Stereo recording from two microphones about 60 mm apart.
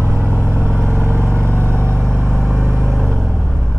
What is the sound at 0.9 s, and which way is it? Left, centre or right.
Vehicle, right.